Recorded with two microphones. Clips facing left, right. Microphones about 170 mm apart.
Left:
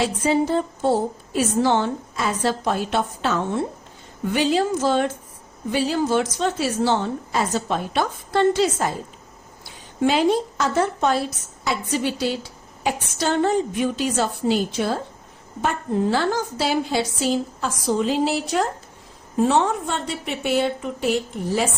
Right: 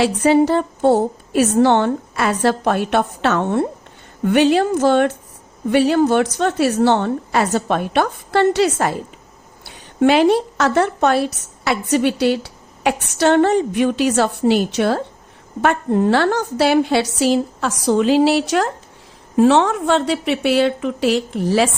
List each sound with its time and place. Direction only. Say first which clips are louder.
0.0 s a woman's voice: right 6 dB; 70° right (ahead or behind); by 21.7 s 90° right